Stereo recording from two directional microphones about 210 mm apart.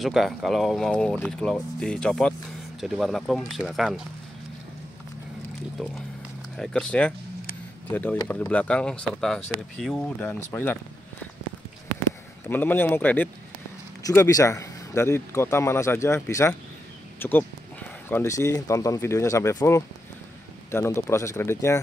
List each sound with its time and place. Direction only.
0.0 s speech: centre (ahead or behind)
6.5 s a man's voice: 5° left (ahead or behind)
12.4 s a man's voice: 10° left (ahead or behind)